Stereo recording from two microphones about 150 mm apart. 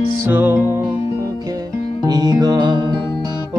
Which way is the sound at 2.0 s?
25° right (ahead or behind).